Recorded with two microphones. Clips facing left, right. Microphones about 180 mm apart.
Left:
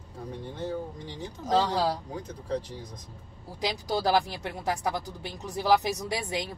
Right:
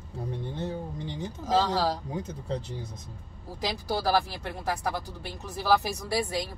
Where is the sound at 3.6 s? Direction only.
15° left (ahead or behind).